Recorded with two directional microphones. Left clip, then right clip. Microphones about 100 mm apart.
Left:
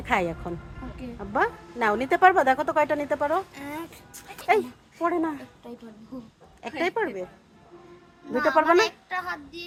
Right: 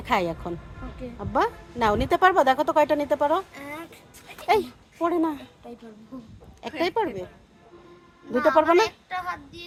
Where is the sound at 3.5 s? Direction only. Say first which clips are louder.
Even; 25° right (ahead or behind).